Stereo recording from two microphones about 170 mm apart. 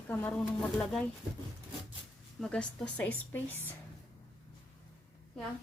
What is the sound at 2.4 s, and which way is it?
A woman's voice, 5° left (ahead or behind).